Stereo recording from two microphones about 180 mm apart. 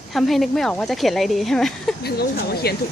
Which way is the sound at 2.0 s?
60° left (ahead or behind).